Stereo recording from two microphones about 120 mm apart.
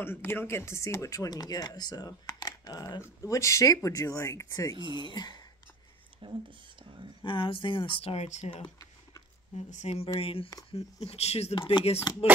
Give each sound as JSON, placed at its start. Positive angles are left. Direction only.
{"t": 0.0, "sound": "speech", "side_deg": 20}
{"t": 4.7, "sound": "speech", "side_deg": -40}
{"t": 5.1, "sound": "speech", "side_deg": 35}
{"t": 6.8, "sound": "a sound", "side_deg": -45}
{"t": 7.2, "sound": "speech", "side_deg": 45}
{"t": 9.7, "sound": "speech", "side_deg": 70}
{"t": 11.5, "sound": "speech", "side_deg": 45}